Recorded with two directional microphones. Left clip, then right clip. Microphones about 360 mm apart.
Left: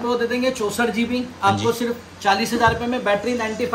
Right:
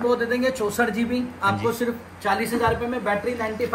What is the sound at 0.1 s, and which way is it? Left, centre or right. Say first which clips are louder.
Speech: left 1 dB; centre.